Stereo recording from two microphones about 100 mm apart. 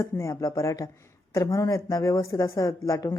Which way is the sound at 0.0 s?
30° left (ahead or behind).